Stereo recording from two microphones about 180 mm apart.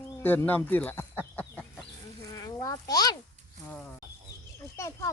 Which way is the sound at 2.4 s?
20° left (ahead or behind).